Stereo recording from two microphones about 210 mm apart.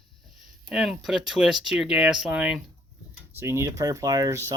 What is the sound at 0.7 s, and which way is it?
Speech, centre (ahead or behind).